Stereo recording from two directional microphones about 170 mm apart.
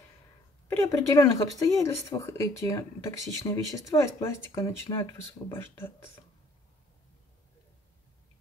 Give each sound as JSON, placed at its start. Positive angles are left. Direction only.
{"t": 0.7, "sound": "speech", "side_deg": 20}